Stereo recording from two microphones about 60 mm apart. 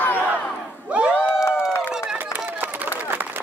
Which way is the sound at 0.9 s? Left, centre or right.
Right.